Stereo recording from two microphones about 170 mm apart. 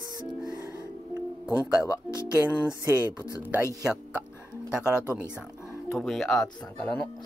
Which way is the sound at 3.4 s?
15° right (ahead or behind).